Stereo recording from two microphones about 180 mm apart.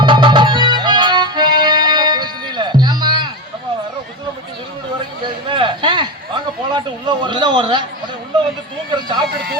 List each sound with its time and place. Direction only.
0.0 s music: 25° right (ahead or behind)
5.2 s a sound: 25° right (ahead or behind)
9.0 s speech: 25° right (ahead or behind)
9.3 s speech: 60° right (ahead or behind)